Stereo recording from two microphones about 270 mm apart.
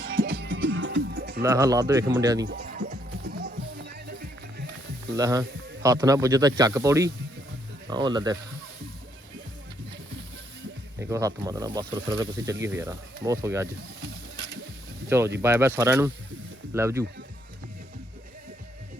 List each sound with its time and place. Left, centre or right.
0.0 s music: right
1.4 s speech: centre
2.5 s music: right
5.1 s speech: centre
11.1 s speech: centre
15.4 s speech: centre